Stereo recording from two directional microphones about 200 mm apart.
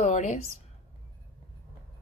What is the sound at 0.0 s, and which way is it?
Speech, 35° left (ahead or behind).